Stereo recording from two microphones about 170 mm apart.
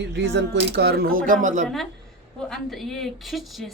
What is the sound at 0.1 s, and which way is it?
Speech, 90° right.